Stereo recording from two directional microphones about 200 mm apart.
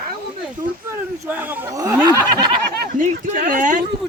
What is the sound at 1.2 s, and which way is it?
Speech, 10° right (ahead or behind).